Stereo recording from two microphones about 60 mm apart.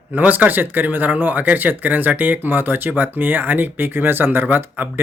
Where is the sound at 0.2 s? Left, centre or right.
Right.